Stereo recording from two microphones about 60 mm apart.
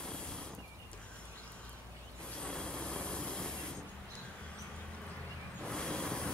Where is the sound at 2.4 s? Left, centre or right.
Centre.